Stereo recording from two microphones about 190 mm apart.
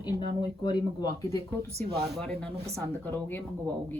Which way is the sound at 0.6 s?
20° left (ahead or behind).